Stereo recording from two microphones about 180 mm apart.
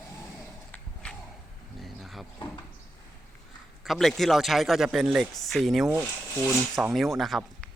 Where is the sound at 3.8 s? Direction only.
Centre (ahead or behind).